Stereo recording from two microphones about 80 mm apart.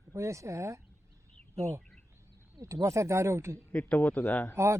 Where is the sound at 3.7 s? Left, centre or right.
Centre.